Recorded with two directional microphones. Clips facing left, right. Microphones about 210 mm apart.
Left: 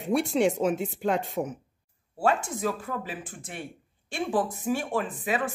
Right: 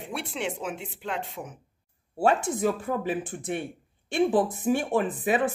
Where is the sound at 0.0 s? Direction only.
40° left (ahead or behind).